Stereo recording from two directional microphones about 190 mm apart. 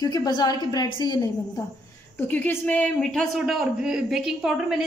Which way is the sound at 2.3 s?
10° left (ahead or behind).